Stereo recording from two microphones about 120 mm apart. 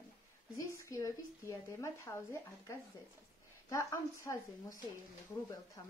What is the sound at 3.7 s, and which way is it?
Speech, 25° left (ahead or behind).